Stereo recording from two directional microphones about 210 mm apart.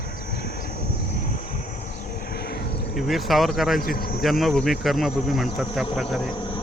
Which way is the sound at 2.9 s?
Centre (ahead or behind).